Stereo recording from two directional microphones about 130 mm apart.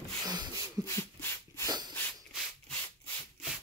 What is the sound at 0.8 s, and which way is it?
Dog, 20° left (ahead or behind).